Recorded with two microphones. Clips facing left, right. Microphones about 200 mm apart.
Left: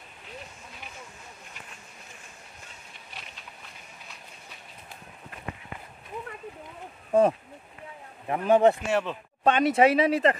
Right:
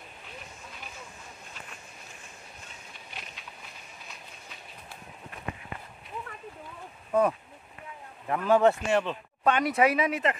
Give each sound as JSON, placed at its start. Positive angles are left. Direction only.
{"t": 7.1, "sound": "speech", "side_deg": 30}
{"t": 8.8, "sound": "speech", "side_deg": 5}
{"t": 9.4, "sound": "speech", "side_deg": 25}